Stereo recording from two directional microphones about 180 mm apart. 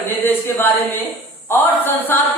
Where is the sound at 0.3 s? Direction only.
10° left (ahead or behind).